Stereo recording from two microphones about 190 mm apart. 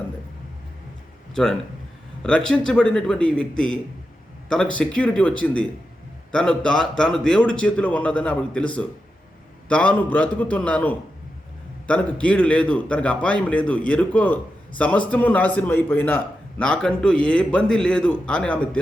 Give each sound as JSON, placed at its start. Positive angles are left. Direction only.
{"t": 2.2, "sound": "a man's voice", "side_deg": 5}